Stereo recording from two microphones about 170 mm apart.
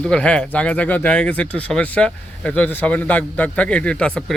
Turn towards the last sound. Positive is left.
turn(degrees=5)  # may be behind; listen again after turning